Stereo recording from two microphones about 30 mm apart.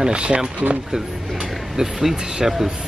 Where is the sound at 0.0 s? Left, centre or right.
Right.